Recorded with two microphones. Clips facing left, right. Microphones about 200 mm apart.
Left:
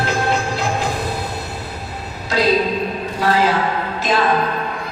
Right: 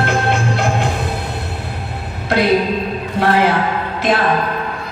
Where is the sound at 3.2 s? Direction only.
60° right (ahead or behind).